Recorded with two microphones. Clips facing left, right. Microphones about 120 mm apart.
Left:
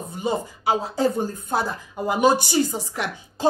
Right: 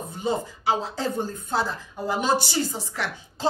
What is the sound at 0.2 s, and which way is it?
A woman's voice, 10° left (ahead or behind).